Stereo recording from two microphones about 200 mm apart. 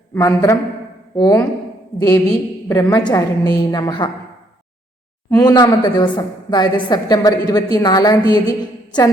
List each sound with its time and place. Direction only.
0.1 s a man's voice: 15° left (ahead or behind)
2.6 s a woman's voice: 15° left (ahead or behind)
5.4 s a woman's voice: 20° left (ahead or behind)